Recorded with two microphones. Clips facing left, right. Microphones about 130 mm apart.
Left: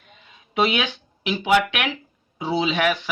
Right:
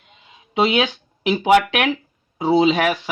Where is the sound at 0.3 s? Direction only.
30° right (ahead or behind).